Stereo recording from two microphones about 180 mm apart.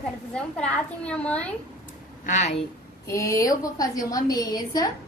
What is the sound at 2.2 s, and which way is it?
Speech, 40° left (ahead or behind).